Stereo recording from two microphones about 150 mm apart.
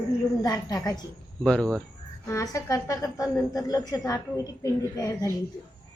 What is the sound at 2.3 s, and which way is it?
A woman's voice, 20° left (ahead or behind).